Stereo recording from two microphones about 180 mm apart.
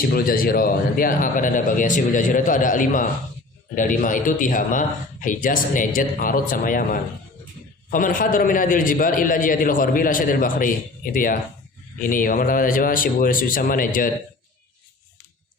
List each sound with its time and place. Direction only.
0.1 s a man's voice: 55° left (ahead or behind)